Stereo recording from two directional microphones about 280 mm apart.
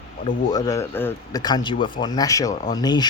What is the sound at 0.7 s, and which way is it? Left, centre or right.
Speech, centre.